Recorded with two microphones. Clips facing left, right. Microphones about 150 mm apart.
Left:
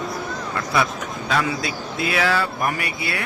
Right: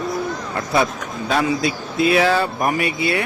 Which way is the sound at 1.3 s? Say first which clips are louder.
Right 4 dB; 25° right (ahead or behind).